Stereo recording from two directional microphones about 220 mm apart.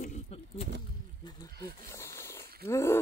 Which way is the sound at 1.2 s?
15° left (ahead or behind).